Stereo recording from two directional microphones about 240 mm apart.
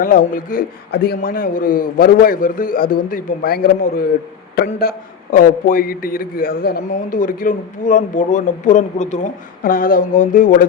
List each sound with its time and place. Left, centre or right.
0.0 s a man's voice: left